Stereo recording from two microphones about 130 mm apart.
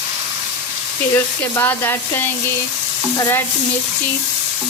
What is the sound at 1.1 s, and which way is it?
Speech, 20° left (ahead or behind).